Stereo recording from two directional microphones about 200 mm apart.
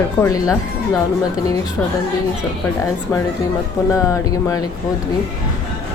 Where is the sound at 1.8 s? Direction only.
10° left (ahead or behind).